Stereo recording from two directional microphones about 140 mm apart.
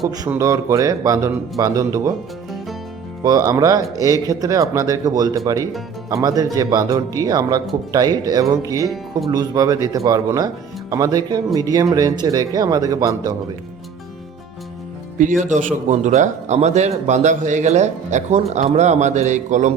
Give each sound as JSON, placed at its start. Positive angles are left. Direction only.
{"t": 0.3, "sound": "speech", "side_deg": -20}
{"t": 3.2, "sound": "speech", "side_deg": -25}
{"t": 15.2, "sound": "a man's voice", "side_deg": -65}